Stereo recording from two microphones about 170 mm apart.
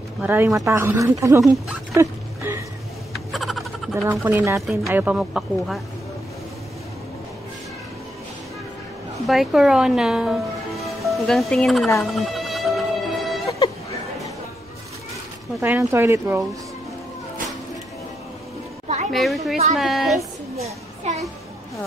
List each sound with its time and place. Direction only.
0.2 s speech: 10° right (ahead or behind)
1.4 s speech: centre (ahead or behind)
2.0 s a sound: 15° right (ahead or behind)
3.3 s a sound: centre (ahead or behind)
4.1 s speech: 15° right (ahead or behind)
9.3 s speech: centre (ahead or behind)
12.0 s music: centre (ahead or behind)
15.6 s speech: 15° right (ahead or behind)
19.1 s speech: centre (ahead or behind)
20.5 s a sound: 40° right (ahead or behind)